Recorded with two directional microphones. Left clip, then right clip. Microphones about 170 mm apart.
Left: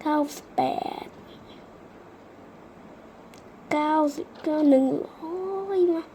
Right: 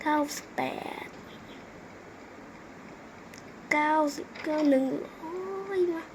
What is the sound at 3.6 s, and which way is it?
Speech, 70° left (ahead or behind).